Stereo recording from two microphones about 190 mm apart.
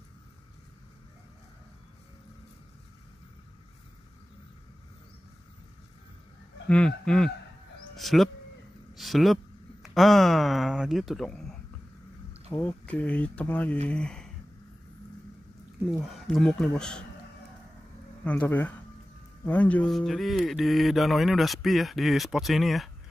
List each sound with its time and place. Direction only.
6.7 s speech: 5° left (ahead or behind)
12.5 s speech: 10° left (ahead or behind)
16.0 s speech: centre (ahead or behind)
18.2 s speech: 10° left (ahead or behind)